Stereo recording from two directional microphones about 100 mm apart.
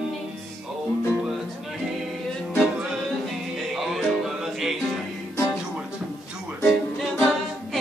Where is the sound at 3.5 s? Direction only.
Centre (ahead or behind).